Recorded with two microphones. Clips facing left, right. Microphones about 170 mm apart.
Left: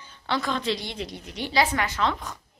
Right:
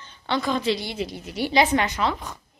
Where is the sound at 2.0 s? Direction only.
5° right (ahead or behind).